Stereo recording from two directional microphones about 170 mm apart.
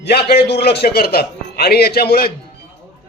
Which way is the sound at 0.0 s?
70° left (ahead or behind).